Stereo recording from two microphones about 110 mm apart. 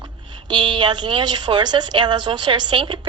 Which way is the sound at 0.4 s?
45° right (ahead or behind).